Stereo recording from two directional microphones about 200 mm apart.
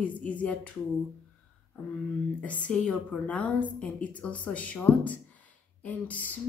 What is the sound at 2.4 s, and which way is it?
Speech, 5° left (ahead or behind).